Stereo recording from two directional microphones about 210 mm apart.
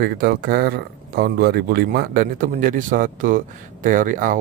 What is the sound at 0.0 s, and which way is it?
Speech, 45° right (ahead or behind).